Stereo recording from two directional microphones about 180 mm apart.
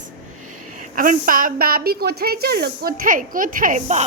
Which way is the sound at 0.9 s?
50° right (ahead or behind).